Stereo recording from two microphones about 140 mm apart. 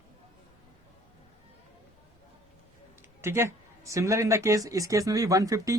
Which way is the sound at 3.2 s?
20° right (ahead or behind).